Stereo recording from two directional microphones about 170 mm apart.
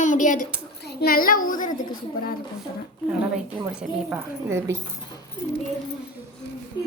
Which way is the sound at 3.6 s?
10° right (ahead or behind).